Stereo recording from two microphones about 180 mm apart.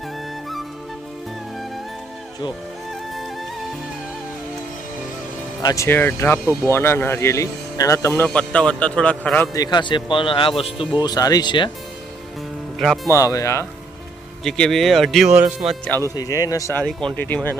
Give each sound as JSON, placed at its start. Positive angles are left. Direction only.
{"t": 5.6, "sound": "speech", "side_deg": 15}
{"t": 9.5, "sound": "speech", "side_deg": 20}
{"t": 13.1, "sound": "speech", "side_deg": 20}
{"t": 14.4, "sound": "speech", "side_deg": 5}
{"t": 16.1, "sound": "speech", "side_deg": 20}